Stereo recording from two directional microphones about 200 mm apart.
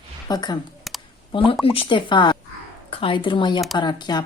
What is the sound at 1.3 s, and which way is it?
Speech, 30° left (ahead or behind).